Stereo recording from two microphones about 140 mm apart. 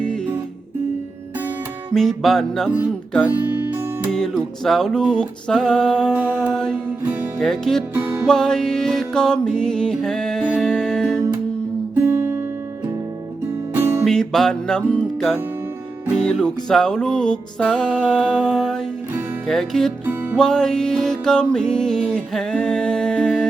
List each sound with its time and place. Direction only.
1.9 s music: centre (ahead or behind)
3.2 s music: 15° right (ahead or behind)
4.1 s music: centre (ahead or behind)
6.1 s mantra: 10° right (ahead or behind)
6.5 s music: 5° left (ahead or behind)
7.9 s music: 15° right (ahead or behind)
8.3 s music: 5° left (ahead or behind)
12.0 s music: 20° right (ahead or behind)
13.7 s music: 15° right (ahead or behind)
14.0 s music: 5° left (ahead or behind)